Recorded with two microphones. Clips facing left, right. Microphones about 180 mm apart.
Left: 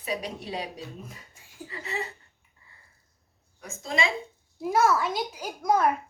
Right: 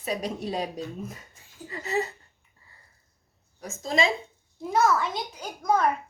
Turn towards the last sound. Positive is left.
turn(degrees=10)  # may be behind; listen again after turning